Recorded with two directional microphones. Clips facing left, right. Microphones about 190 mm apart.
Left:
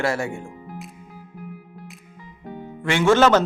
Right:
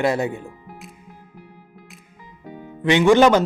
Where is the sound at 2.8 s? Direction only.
15° right (ahead or behind).